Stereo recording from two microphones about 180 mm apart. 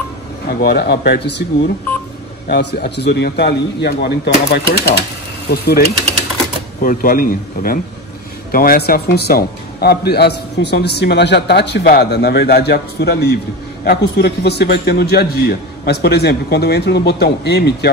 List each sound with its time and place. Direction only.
0.5 s a man's voice: 60° left (ahead or behind)
2.4 s a man's voice: 65° left (ahead or behind)
6.8 s a man's voice: 50° left (ahead or behind)